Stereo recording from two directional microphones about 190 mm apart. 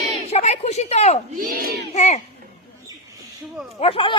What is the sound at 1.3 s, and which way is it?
Speech, 50° right (ahead or behind).